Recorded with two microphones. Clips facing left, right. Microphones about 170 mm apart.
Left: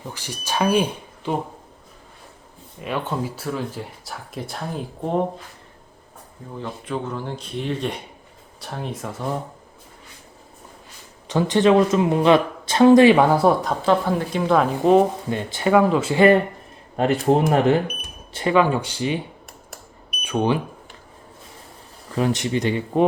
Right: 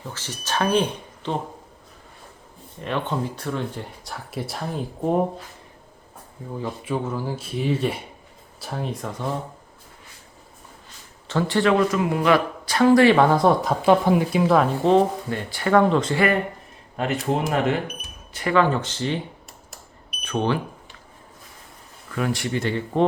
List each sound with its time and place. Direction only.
0.1 s speech: 10° left (ahead or behind)
2.8 s speech: 5° left (ahead or behind)
6.6 s speech: 5° right (ahead or behind)
11.3 s speech: 15° left (ahead or behind)
13.8 s speech: 15° right (ahead or behind); by 15.0 s 5° left (ahead or behind)
15.3 s speech: 20° left (ahead or behind)
15.7 s speech: 5° left (ahead or behind)
16.1 s speech: 30° left (ahead or behind)
18.5 s speech: 10° left (ahead or behind)
20.2 s speech: 10° left (ahead or behind)
22.1 s speech: 25° left (ahead or behind)